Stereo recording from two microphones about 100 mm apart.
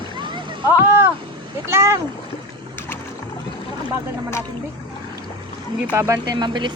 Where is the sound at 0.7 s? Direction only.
25° right (ahead or behind).